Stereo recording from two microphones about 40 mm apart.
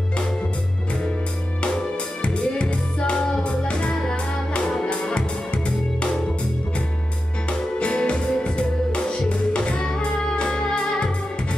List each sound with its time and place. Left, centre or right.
2.2 s music: left
7.4 s music: left